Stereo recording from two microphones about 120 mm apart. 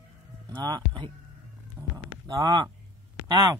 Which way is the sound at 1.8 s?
10° right (ahead or behind).